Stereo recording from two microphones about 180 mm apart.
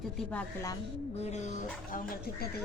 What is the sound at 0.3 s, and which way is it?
Speech, 15° left (ahead or behind).